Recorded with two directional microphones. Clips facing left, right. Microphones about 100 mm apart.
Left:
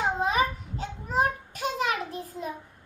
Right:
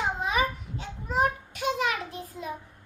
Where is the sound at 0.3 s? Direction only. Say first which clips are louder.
Left 2 dB; 40° left (ahead or behind).